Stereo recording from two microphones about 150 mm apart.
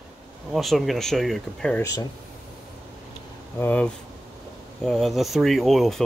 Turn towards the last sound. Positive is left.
turn(degrees=0)  # may be behind; listen again after turning